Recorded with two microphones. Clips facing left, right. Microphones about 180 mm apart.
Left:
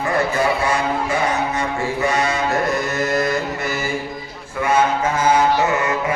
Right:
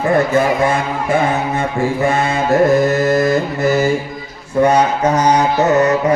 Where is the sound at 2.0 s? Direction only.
50° right (ahead or behind).